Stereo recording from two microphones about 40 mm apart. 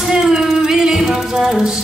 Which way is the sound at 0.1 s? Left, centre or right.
Centre.